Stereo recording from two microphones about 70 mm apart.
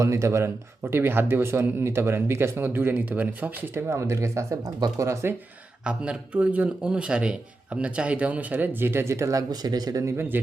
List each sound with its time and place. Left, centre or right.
0.0 s speech: right
0.8 s speech: right
3.8 s speech: right
4.6 s speech: right
5.0 s speech: right
5.8 s speech: centre; by 9.4 s right
9.5 s speech: right
10.1 s speech: right